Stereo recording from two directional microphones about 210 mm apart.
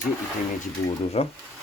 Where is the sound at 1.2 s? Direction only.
30° left (ahead or behind).